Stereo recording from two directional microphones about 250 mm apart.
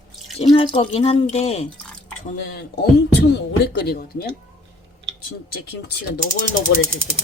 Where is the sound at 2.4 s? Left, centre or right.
Left.